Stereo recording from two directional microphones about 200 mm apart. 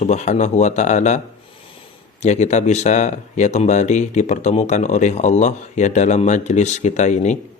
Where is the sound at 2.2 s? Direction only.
35° left (ahead or behind).